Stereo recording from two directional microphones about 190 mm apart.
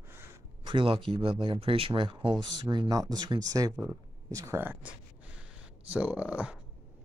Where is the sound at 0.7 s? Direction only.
25° right (ahead or behind); by 6.6 s 5° right (ahead or behind).